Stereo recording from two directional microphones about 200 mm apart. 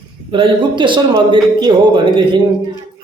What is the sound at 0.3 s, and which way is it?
Speech, 25° right (ahead or behind).